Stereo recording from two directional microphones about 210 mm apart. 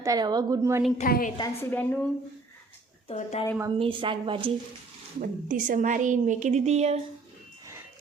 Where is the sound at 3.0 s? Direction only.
30° left (ahead or behind).